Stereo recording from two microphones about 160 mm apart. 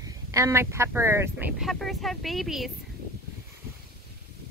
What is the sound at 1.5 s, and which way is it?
Speech, centre (ahead or behind).